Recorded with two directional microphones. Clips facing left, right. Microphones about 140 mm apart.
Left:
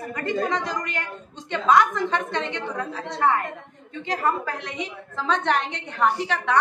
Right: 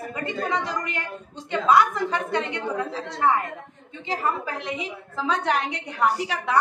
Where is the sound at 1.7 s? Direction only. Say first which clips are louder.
Left 1 dB; 5° right (ahead or behind).